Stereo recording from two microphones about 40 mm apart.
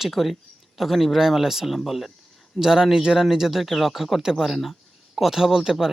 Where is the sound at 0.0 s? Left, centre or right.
Centre.